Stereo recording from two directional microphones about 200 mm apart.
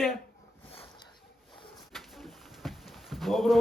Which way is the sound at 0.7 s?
25° left (ahead or behind).